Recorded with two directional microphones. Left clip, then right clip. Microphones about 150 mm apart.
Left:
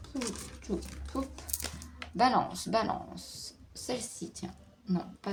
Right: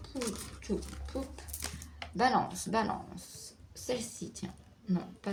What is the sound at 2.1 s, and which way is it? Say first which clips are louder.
Speech: left 2 dB; 30° left (ahead or behind).